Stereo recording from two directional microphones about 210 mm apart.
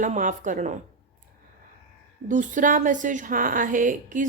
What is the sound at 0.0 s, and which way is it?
Speech, 35° right (ahead or behind).